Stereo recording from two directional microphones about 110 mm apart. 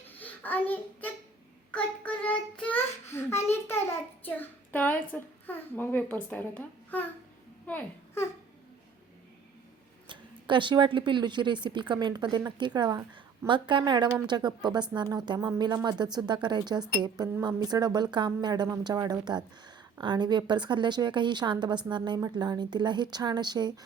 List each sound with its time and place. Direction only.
0.2 s a child's voice: 15° left (ahead or behind)
10.1 s a woman's voice: 45° right (ahead or behind)